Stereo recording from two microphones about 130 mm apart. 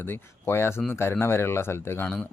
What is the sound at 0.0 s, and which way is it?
A man's voice, 15° left (ahead or behind).